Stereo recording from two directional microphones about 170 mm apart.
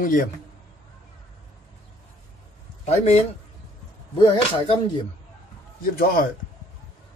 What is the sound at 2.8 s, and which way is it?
Speech, 40° left (ahead or behind).